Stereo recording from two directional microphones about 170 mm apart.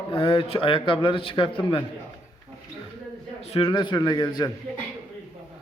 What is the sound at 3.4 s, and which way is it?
A man's voice, 35° left (ahead or behind).